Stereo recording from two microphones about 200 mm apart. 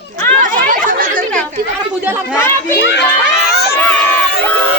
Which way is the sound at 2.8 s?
65° left (ahead or behind).